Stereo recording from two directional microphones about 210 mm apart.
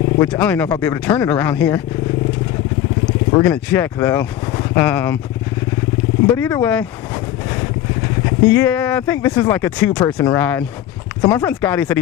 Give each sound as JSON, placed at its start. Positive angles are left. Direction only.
{"t": 0.2, "sound": "speech", "side_deg": 5}
{"t": 3.4, "sound": "speech", "side_deg": 5}
{"t": 6.3, "sound": "speech", "side_deg": 10}
{"t": 10.0, "sound": "speech", "side_deg": 20}